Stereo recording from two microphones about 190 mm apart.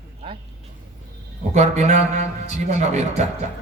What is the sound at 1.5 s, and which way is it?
A man's voice, 35° right (ahead or behind).